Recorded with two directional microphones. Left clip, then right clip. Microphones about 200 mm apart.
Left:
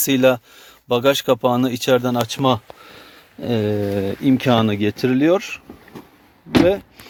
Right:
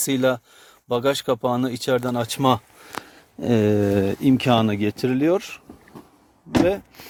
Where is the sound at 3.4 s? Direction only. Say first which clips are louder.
Right 1 dB; 30° right (ahead or behind).